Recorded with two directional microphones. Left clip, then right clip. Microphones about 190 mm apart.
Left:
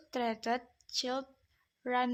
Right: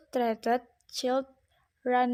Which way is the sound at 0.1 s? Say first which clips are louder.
Right 6 dB; 30° right (ahead or behind).